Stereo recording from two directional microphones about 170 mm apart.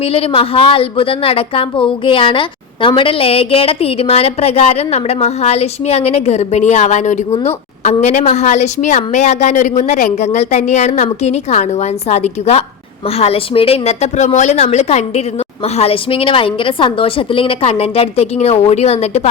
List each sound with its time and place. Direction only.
0.0 s a woman's voice: 35° left (ahead or behind)